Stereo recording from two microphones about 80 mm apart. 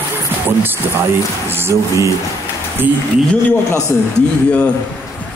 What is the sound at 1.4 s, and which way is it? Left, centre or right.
Speech, right.